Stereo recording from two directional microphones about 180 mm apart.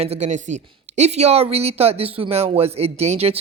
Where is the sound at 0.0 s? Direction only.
35° right (ahead or behind).